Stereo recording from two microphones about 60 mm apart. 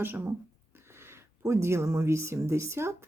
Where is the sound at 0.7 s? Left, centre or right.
Right.